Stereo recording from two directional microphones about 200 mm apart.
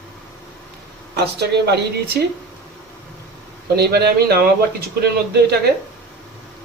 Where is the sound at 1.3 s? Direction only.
55° right (ahead or behind).